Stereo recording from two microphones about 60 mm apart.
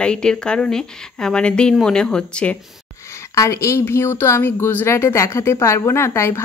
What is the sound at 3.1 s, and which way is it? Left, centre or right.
A woman's voice, left.